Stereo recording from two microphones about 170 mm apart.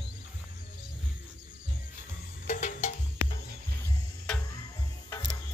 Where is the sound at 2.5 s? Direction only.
45° left (ahead or behind).